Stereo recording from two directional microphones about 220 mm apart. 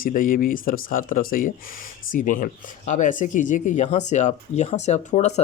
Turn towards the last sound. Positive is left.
turn(degrees=30)  # may be behind; listen again after turning